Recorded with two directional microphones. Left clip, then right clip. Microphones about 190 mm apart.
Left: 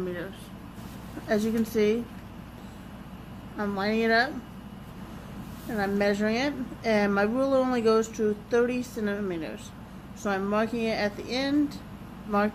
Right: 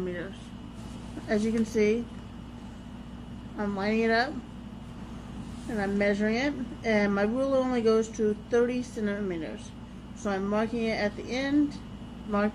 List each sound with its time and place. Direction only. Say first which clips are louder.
1.2 s a woman's voice: left 1 dB; centre (ahead or behind)
3.5 s a woman's voice: left 1 dB; centre (ahead or behind)
5.7 s a woman's voice: left 1 dB; centre (ahead or behind)